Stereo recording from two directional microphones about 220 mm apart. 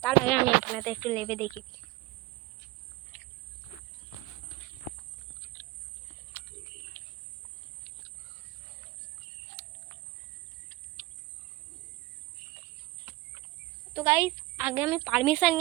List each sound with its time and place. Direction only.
0.0 s a sound: 5° left (ahead or behind)
9.6 s cricket: 35° right (ahead or behind)
11.0 s cricket: 25° right (ahead or behind)
13.9 s speech: 10° right (ahead or behind)